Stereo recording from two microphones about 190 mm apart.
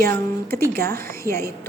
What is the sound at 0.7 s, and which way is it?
Speech, 50° right (ahead or behind).